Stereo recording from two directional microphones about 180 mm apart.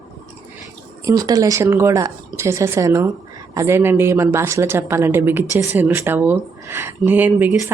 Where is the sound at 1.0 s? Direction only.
20° right (ahead or behind).